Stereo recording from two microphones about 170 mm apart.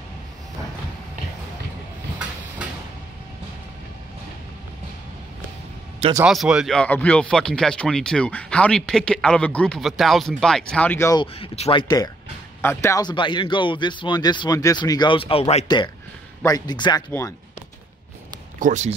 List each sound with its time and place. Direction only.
6.2 s speech: 5° right (ahead or behind); by 11.2 s 15° left (ahead or behind)
11.3 s speech: 35° left (ahead or behind)
12.6 s speech: 15° left (ahead or behind); by 15.6 s 35° left (ahead or behind)
16.4 s speech: 25° left (ahead or behind)
18.6 s speech: 45° right (ahead or behind)